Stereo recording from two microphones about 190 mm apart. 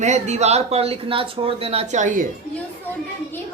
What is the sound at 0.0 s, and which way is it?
Speech, 35° right (ahead or behind).